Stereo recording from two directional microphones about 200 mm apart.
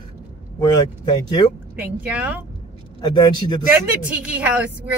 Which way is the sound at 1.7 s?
5° right (ahead or behind).